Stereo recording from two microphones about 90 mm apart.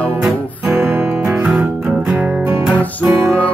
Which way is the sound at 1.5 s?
10° right (ahead or behind).